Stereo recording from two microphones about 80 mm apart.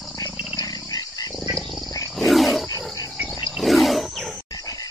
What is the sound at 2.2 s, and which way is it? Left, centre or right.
Wild animals, centre.